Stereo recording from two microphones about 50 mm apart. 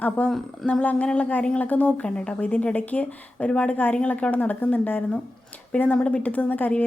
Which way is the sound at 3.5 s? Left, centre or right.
Left.